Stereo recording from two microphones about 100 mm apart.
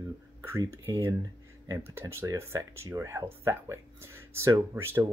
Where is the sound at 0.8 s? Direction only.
30° right (ahead or behind).